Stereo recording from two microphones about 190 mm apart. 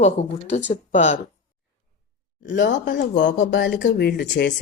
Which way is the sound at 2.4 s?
70° left (ahead or behind).